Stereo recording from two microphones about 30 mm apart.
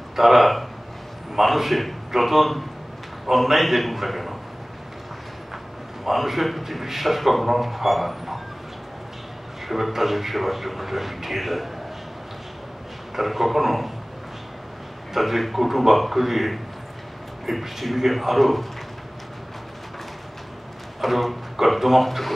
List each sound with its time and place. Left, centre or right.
0.1 s speech: centre
6.0 s speech: centre
9.7 s speech: centre
13.1 s speech: centre
15.1 s speech: centre
21.0 s speech: centre